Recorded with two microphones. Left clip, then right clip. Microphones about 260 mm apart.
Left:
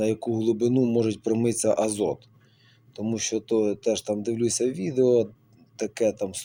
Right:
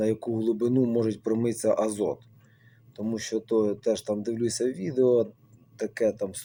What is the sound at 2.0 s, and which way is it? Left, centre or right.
Speech, left.